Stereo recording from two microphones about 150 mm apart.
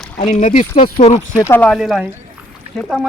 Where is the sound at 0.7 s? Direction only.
45° left (ahead or behind).